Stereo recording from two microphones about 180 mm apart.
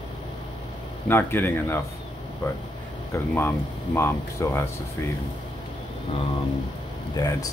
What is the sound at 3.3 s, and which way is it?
Speech, 10° left (ahead or behind).